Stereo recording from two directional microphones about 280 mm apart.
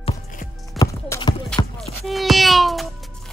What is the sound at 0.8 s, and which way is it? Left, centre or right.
Clip-clop, centre.